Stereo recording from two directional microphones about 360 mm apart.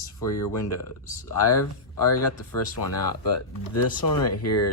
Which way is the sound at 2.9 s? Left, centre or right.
Left.